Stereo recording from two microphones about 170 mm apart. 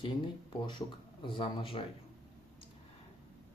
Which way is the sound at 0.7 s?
30° left (ahead or behind).